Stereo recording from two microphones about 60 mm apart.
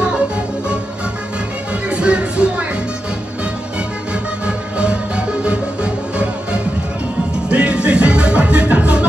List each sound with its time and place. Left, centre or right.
1.9 s music: centre
4.1 s music: centre
7.4 s music: centre